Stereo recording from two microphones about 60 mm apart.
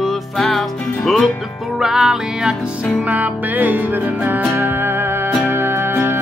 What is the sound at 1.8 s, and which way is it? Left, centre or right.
Music, centre.